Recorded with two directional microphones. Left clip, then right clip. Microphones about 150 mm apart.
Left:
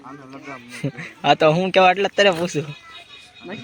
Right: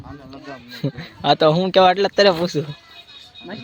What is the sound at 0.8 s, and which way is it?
Speech, 15° right (ahead or behind).